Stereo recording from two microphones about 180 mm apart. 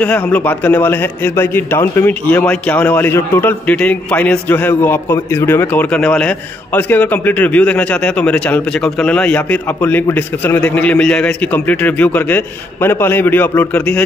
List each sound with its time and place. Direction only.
0.0 s a man's voice: 10° left (ahead or behind)